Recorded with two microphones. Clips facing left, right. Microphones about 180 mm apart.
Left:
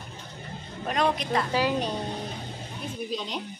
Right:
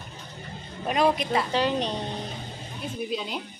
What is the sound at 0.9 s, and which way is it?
Speech, 5° right (ahead or behind).